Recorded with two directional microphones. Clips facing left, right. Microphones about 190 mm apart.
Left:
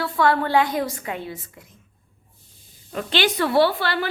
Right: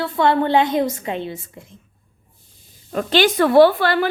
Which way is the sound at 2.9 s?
45° right (ahead or behind).